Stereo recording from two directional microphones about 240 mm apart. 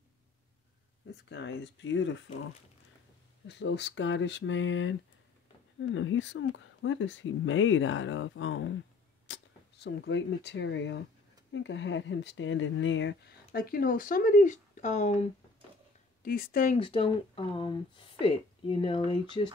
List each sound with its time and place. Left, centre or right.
1.3 s speech: left
3.4 s speech: left; by 19.5 s centre